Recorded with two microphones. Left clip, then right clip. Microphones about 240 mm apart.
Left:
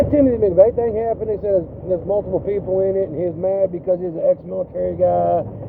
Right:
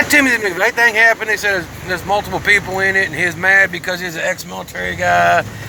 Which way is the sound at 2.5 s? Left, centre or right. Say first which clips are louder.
Right 8 dB; right.